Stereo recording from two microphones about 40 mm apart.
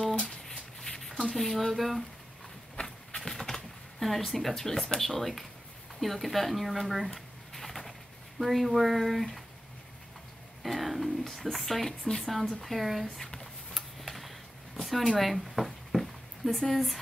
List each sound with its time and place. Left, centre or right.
0.1 s a sound: left
0.7 s a sound: centre
1.3 s speech: centre
2.7 s run: left
3.2 s bird: centre
4.0 s speech: centre
7.2 s a sound: centre
8.4 s speech: centre
10.6 s speech: centre
13.0 s speech: centre
13.7 s tick-tock: centre
14.8 s a sound: centre
16.5 s speech: centre